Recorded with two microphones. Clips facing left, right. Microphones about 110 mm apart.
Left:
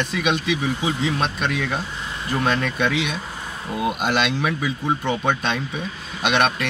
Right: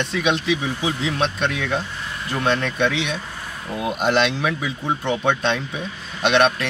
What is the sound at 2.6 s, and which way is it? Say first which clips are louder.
Speech: right 1 dB; 5° left (ahead or behind).